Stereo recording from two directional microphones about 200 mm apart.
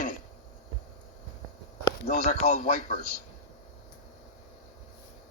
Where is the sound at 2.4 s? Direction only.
50° left (ahead or behind).